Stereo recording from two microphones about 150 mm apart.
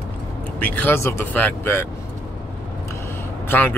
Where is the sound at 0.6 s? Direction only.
10° left (ahead or behind).